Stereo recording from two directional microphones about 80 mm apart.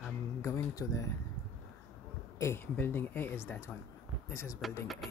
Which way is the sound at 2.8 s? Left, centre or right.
Left.